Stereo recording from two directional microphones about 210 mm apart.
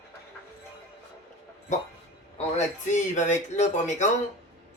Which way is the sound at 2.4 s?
35° left (ahead or behind).